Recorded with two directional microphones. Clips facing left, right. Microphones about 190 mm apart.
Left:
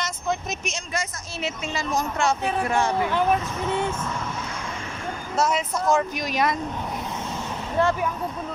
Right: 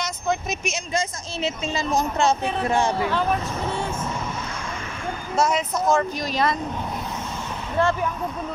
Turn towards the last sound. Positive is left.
turn(degrees=15)  # may be behind; listen again after turning